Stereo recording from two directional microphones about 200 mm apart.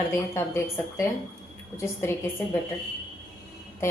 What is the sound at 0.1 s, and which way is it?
A woman's voice, 15° left (ahead or behind).